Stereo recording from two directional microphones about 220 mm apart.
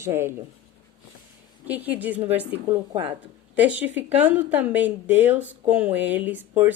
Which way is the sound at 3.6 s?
5° right (ahead or behind).